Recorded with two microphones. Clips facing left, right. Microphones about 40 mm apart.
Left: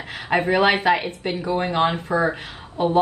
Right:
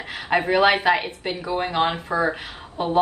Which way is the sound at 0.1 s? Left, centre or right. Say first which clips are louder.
Even; centre.